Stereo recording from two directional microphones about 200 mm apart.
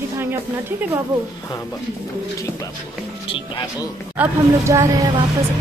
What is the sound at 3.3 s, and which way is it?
Speech, 20° left (ahead or behind).